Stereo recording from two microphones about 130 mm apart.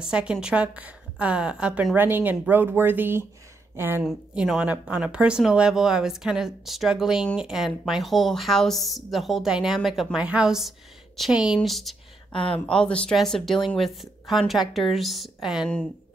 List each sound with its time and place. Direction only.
0.0 s a woman's voice: 5° right (ahead or behind)
4.0 s speech: 5° right (ahead or behind)
12.3 s a woman's voice: 45° left (ahead or behind)
12.5 s speech: 10° left (ahead or behind)